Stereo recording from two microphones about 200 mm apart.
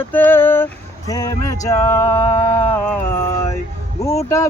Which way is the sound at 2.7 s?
10° left (ahead or behind).